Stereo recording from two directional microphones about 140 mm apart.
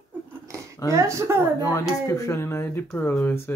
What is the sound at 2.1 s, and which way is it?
Speech, 20° left (ahead or behind).